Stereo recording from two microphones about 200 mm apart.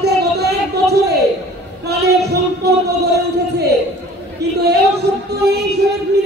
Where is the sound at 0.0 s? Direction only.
55° right (ahead or behind).